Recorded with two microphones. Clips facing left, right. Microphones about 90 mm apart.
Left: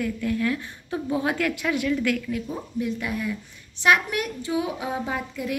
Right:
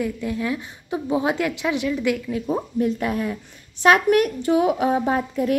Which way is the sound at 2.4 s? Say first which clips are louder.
Right 6 dB; 45° right (ahead or behind).